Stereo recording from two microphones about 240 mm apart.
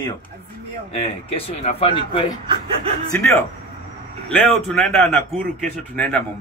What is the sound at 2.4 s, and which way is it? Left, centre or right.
Chuckle, centre.